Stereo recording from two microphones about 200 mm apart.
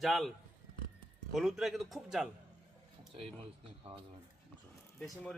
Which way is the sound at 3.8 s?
30° right (ahead or behind).